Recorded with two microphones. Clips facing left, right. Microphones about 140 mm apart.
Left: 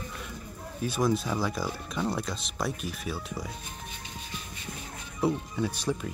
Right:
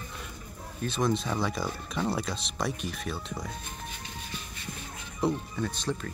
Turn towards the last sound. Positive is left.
turn(degrees=10)  # may be behind; listen again after turning